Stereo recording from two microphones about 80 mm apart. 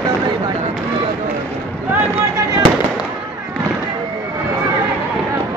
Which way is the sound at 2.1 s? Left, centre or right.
Right.